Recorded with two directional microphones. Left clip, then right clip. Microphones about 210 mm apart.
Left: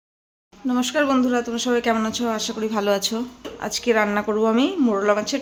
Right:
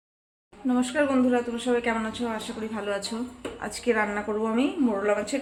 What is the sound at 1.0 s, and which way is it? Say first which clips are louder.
Speech: left 3 dB; 50° left (ahead or behind).